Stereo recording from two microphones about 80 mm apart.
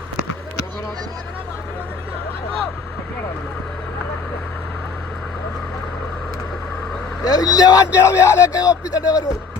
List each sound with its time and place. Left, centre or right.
7.3 s a man's voice: left
7.9 s a man's voice: left